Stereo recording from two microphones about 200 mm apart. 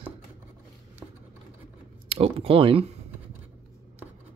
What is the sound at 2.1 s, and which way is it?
Speech, 30° right (ahead or behind).